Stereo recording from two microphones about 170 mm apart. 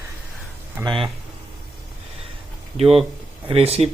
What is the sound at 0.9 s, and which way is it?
Speech, 30° right (ahead or behind).